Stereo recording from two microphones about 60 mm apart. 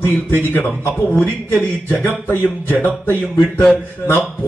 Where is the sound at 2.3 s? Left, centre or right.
Left.